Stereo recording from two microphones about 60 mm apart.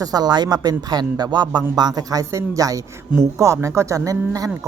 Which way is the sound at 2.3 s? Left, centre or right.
Right.